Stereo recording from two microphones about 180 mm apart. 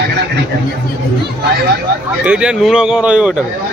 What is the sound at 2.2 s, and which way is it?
A man's voice, 5° right (ahead or behind).